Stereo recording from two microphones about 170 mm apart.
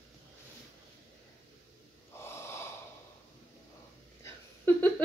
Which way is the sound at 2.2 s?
15° left (ahead or behind).